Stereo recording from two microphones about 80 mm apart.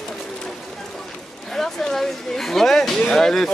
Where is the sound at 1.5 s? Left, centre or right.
Centre.